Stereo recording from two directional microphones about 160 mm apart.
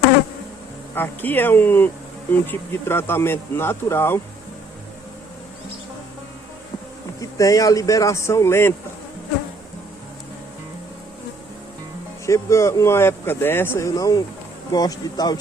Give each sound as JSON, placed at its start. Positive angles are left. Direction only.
{"t": 0.9, "sound": "speech", "side_deg": 10}
{"t": 7.2, "sound": "speech", "side_deg": 20}
{"t": 12.2, "sound": "speech", "side_deg": 20}